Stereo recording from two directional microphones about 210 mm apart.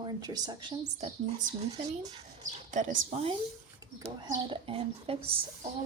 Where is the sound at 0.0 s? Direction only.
20° right (ahead or behind).